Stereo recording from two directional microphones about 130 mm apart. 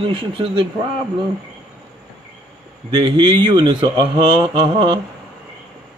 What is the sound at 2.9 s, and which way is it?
A man's voice, 35° right (ahead or behind).